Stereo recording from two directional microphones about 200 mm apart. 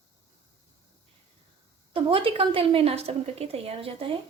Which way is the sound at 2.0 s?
25° right (ahead or behind).